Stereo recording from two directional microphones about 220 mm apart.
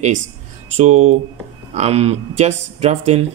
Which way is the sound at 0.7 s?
30° right (ahead or behind).